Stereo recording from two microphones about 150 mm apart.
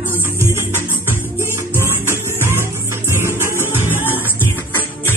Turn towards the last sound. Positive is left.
turn(degrees=-15)  # may be behind; listen again after turning